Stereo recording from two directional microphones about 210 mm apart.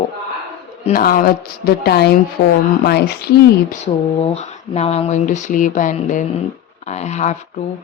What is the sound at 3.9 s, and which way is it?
Speech, 30° left (ahead or behind).